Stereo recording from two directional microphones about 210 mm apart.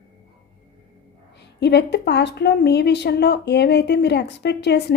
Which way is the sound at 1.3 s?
55° left (ahead or behind).